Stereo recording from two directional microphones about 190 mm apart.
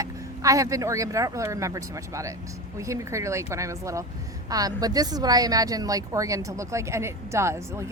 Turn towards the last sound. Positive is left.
turn(degrees=-15)  # may be behind; listen again after turning